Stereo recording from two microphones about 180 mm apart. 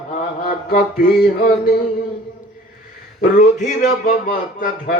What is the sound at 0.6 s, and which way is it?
Music, 55° left (ahead or behind).